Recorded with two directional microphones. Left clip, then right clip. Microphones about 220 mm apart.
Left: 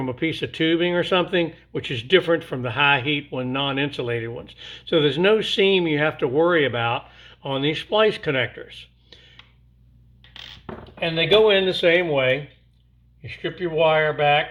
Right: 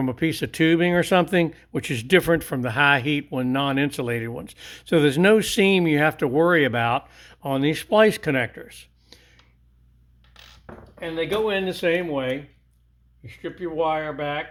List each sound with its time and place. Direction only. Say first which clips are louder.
0.0 s speech: even; 45° right (ahead or behind)
11.0 s speech: left 7 dB; 30° right (ahead or behind)